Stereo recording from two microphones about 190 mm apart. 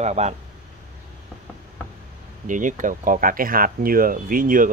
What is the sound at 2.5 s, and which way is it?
Speech, 45° right (ahead or behind).